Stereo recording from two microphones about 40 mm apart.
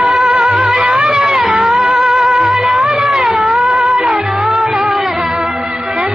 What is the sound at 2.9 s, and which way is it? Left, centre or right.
Cat, centre.